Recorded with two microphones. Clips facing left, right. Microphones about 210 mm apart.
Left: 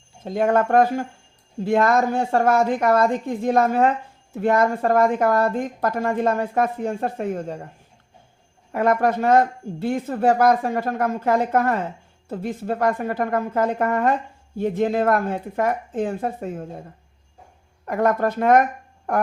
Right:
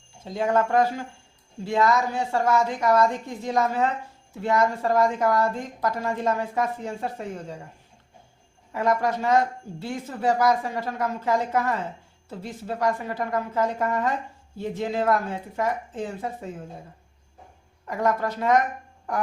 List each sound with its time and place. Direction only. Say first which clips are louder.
0.3 s a woman's voice: left 4 dB; 55° left (ahead or behind)
8.7 s a woman's voice: left 4 dB; 55° left (ahead or behind)
17.8 s a woman's voice: left 5 dB; 55° left (ahead or behind)